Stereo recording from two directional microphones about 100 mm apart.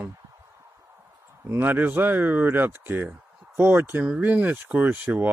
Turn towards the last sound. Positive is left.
turn(degrees=-20)  # may be behind; listen again after turning